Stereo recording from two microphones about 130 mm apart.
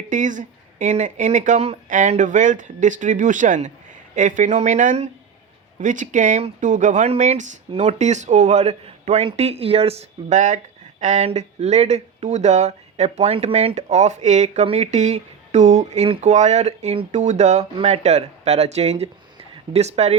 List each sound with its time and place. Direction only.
0.1 s speech: 80° right; by 1.8 s 55° right (ahead or behind)
1.9 s speech: 75° right (ahead or behind)
7.7 s speech: 55° right (ahead or behind)